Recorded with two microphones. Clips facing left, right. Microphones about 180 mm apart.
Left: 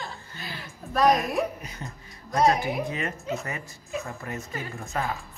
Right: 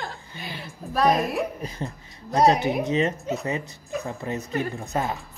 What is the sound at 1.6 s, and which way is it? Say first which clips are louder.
Speech: right 7 dB; 30° right (ahead or behind).